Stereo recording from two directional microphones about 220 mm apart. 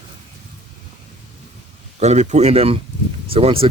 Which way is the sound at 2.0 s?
30° right (ahead or behind).